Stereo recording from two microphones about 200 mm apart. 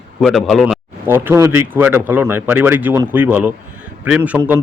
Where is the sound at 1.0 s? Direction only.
10° right (ahead or behind).